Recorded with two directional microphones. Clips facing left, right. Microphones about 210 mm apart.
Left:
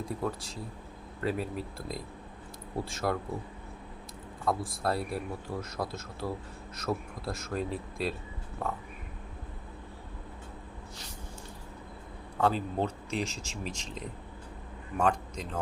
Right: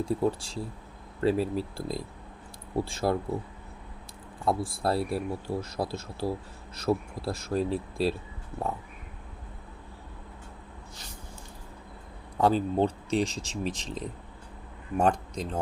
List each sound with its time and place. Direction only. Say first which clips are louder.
0.0 s speech: right 7 dB; 30° right (ahead or behind)
4.4 s speech: right 3 dB; 30° right (ahead or behind)
12.4 s speech: right 5 dB; 35° right (ahead or behind)